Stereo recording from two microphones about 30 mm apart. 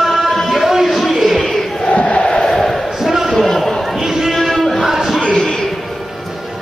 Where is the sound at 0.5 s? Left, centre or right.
Centre.